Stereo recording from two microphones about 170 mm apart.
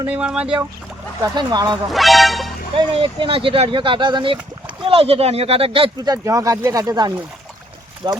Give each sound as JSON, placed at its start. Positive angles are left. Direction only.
{"t": 0.1, "sound": "speech", "side_deg": -5}
{"t": 1.2, "sound": "speech", "side_deg": -25}
{"t": 1.9, "sound": "speech", "side_deg": 0}
{"t": 2.7, "sound": "speech", "side_deg": -30}
{"t": 6.2, "sound": "speech", "side_deg": -20}